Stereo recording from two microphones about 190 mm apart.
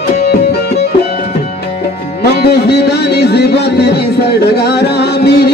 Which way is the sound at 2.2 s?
60° left (ahead or behind).